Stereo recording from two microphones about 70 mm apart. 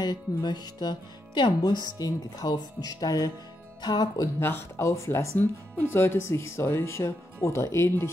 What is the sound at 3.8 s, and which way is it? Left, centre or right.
Speech, left.